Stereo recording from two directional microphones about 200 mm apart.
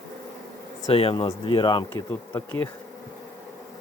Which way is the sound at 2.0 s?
10° left (ahead or behind).